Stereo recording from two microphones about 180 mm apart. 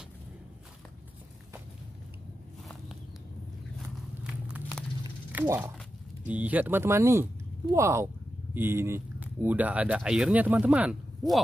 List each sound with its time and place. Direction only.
4.2 s walk: 5° right (ahead or behind)
5.3 s speech: 10° right (ahead or behind)